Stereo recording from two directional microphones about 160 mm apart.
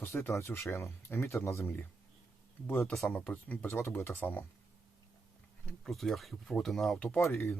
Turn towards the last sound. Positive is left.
turn(degrees=15)  # may be behind; listen again after turning